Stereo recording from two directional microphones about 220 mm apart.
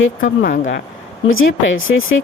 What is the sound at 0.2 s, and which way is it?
Speech, 35° left (ahead or behind).